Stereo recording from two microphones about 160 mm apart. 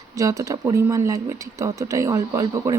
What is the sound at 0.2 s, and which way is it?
Speech, 20° right (ahead or behind).